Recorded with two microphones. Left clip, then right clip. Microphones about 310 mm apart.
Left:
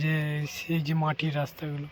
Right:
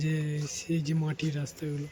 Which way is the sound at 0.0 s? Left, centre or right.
Centre.